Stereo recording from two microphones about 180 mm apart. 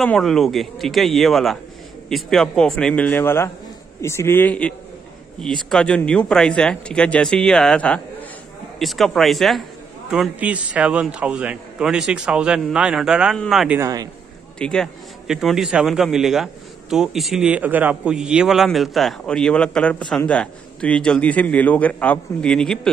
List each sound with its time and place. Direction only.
0.0 s a man's voice: 5° left (ahead or behind)
13.7 s speech: 20° right (ahead or behind)
14.6 s a man's voice: 5° left (ahead or behind)